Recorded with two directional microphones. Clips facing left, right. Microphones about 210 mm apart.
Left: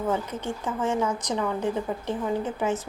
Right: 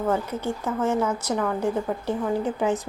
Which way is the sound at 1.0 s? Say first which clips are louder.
Right 2 dB; 10° right (ahead or behind).